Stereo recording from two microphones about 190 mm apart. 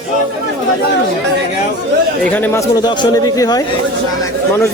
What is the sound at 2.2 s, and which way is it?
Speech, 10° left (ahead or behind).